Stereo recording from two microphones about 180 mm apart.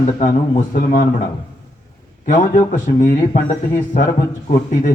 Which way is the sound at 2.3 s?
45° left (ahead or behind).